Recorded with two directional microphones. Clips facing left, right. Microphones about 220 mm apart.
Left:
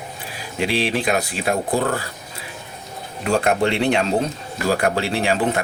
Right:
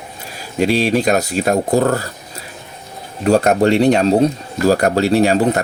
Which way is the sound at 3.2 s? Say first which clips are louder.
Right 6 dB; 40° right (ahead or behind).